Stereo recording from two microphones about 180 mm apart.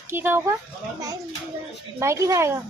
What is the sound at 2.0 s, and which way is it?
Speech, 15° right (ahead or behind).